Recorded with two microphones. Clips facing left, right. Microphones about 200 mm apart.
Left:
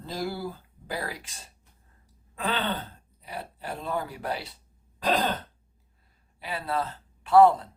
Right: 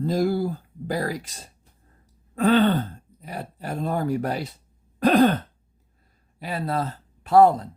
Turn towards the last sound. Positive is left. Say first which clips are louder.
# right 2 dB
turn(degrees=-40)  # may be behind; listen again after turning